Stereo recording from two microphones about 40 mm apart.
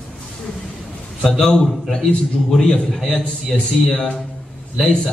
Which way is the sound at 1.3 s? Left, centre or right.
Centre.